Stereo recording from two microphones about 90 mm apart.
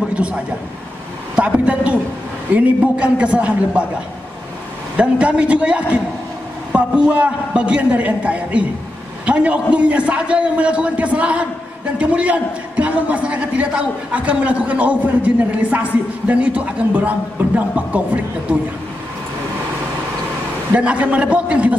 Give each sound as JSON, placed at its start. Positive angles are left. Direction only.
{"t": 0.1, "sound": "a man's voice", "side_deg": -10}
{"t": 4.9, "sound": "a man's voice", "side_deg": -15}
{"t": 20.7, "sound": "a man's voice", "side_deg": -15}